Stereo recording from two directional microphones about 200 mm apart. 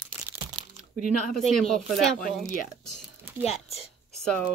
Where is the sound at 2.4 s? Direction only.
40° left (ahead or behind).